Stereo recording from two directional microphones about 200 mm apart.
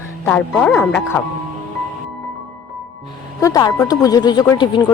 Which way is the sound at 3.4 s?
15° left (ahead or behind).